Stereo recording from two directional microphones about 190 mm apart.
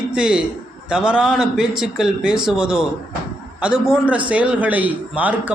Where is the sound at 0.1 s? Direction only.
5° right (ahead or behind).